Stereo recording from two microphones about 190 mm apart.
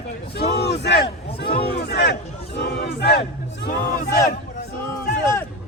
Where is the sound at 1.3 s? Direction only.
55° left (ahead or behind).